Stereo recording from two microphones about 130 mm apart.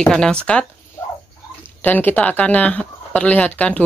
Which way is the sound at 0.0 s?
5° left (ahead or behind).